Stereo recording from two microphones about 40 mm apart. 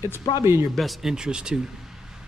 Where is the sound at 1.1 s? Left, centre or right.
Centre.